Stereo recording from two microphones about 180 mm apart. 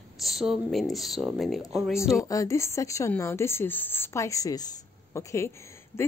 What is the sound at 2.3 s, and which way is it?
Speech, 15° left (ahead or behind).